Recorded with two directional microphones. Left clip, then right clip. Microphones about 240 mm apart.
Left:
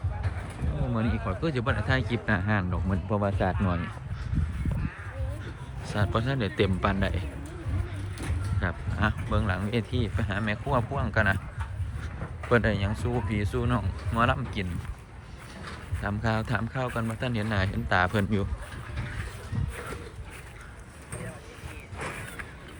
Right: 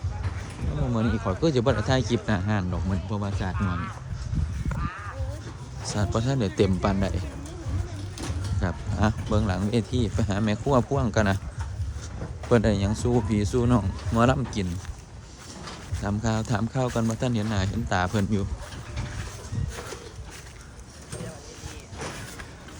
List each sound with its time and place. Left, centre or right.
0.9 s speech: centre
6.0 s speech: centre
8.6 s speech: right
12.5 s speech: right